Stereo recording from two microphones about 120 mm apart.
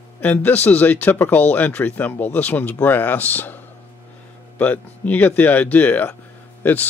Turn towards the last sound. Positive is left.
turn(degrees=15)  # may be behind; listen again after turning